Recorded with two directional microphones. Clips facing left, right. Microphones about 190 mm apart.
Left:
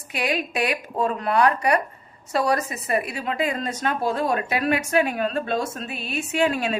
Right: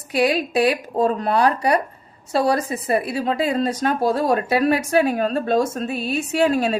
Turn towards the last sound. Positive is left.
turn(degrees=-40)  # may be behind; listen again after turning